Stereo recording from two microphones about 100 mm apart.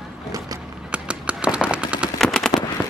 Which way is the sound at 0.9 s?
10° right (ahead or behind).